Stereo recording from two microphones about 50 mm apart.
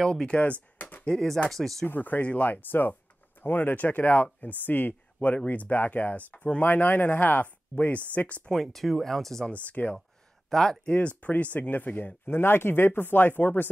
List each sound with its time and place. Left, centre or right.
0.0 s speech: centre
0.4 s speech: left
1.0 s speech: centre
1.9 s speech: left
5.3 s speech: left
8.5 s speech: centre
9.5 s speech: left
10.5 s speech: centre
10.9 s speech: left
12.3 s speech: left